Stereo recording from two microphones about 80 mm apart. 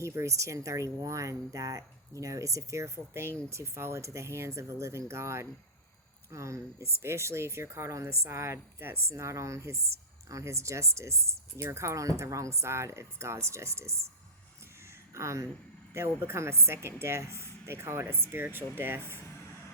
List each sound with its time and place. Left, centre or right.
0.0 s speech: right
15.1 s speech: right